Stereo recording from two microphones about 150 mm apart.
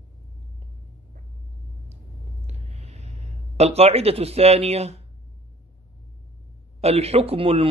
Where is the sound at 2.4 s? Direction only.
45° right (ahead or behind).